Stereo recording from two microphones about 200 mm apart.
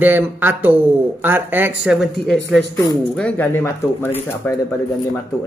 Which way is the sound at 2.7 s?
15° left (ahead or behind).